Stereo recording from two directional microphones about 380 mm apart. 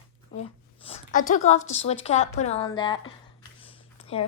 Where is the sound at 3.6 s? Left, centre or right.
Centre.